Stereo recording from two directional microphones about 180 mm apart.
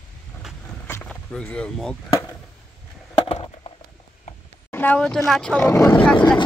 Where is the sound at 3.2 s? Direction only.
30° left (ahead or behind).